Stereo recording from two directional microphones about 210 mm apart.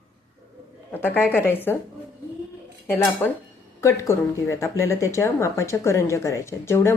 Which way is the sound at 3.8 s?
15° left (ahead or behind).